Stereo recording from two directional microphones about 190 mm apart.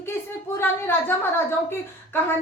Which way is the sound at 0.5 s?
10° left (ahead or behind).